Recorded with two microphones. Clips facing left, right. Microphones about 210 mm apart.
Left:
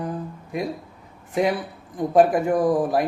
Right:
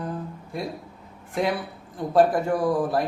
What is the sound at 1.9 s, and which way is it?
A man's voice, 15° left (ahead or behind).